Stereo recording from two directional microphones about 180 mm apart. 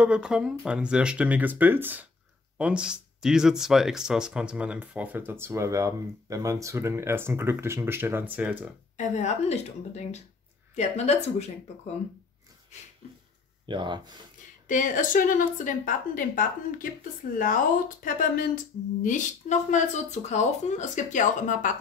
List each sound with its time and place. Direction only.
0.0 s speech: 5° right (ahead or behind)
8.9 s a woman's voice: 40° left (ahead or behind)
13.7 s speech: 25° right (ahead or behind)
14.7 s speech: 45° left (ahead or behind)